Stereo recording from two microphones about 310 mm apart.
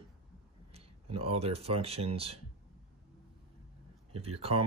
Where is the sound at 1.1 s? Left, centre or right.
Centre.